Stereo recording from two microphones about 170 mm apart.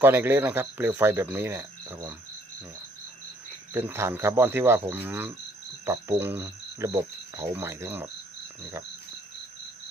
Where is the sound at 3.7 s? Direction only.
15° right (ahead or behind).